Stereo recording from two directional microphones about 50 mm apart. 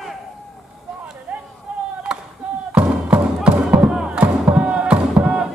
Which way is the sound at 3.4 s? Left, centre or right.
Right.